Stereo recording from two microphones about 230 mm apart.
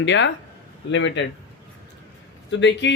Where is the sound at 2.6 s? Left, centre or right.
Left.